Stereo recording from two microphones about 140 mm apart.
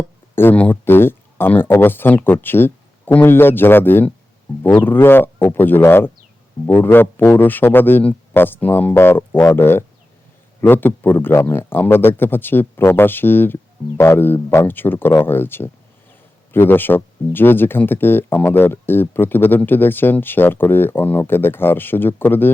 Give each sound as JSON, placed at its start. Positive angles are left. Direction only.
{"t": 0.3, "sound": "speech", "side_deg": 15}